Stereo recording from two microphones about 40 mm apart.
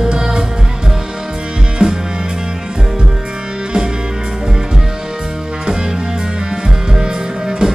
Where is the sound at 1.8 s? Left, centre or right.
Centre.